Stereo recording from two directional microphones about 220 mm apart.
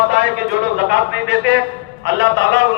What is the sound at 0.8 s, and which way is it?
A man's voice, 50° right (ahead or behind).